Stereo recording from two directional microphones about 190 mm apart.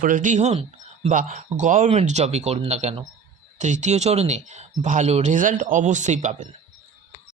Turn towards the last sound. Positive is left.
turn(degrees=-40)  # may be behind; listen again after turning